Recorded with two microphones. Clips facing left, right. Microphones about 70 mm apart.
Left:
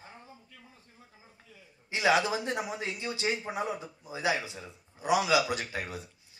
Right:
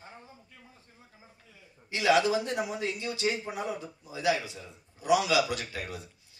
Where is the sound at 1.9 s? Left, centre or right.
Left.